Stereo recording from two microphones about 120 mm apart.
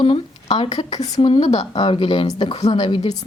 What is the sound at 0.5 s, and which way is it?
Speech, 55° left (ahead or behind).